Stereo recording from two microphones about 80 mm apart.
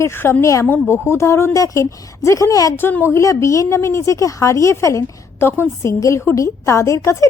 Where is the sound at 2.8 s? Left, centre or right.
Left.